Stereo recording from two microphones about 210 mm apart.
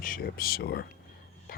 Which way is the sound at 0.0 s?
45° left (ahead or behind).